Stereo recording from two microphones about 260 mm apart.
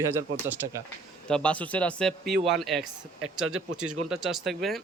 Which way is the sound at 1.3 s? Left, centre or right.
Centre.